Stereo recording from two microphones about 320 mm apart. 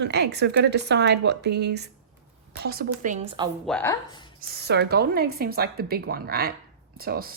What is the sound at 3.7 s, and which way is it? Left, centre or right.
Speech, centre.